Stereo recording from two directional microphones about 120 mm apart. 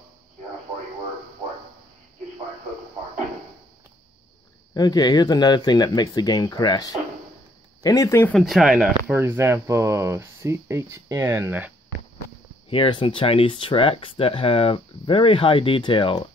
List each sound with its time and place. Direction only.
4.7 s speech: 35° left (ahead or behind)
8.3 s speech: centre (ahead or behind)
9.1 s speech: 20° right (ahead or behind)
12.6 s speech: 50° left (ahead or behind)